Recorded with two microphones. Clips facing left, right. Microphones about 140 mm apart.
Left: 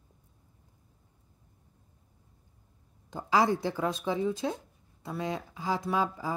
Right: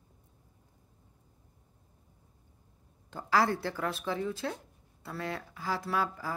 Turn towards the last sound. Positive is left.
turn(degrees=20)  # may be behind; listen again after turning